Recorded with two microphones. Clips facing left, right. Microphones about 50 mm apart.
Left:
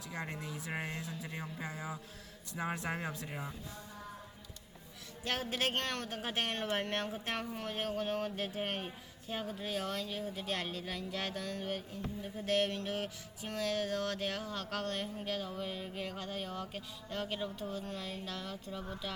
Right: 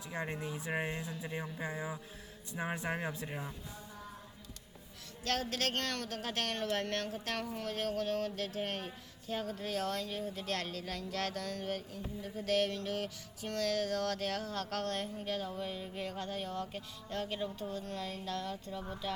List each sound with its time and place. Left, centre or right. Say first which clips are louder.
0.4 s speech: right 3 dB; right
2.6 s speech: even; centre
5.2 s mantra: even; centre
15.8 s speech: right 1 dB; centre